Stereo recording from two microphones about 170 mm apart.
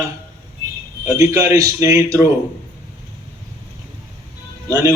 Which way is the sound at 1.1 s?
20° right (ahead or behind).